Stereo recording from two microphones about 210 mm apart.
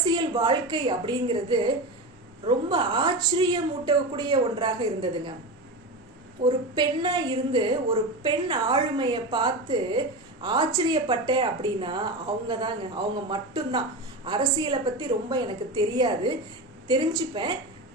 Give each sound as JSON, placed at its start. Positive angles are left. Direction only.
{"t": 0.0, "sound": "a woman's voice", "side_deg": -20}
{"t": 6.4, "sound": "a woman's voice", "side_deg": -20}